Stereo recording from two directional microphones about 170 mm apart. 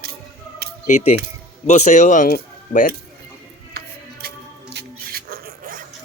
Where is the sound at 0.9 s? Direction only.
45° left (ahead or behind).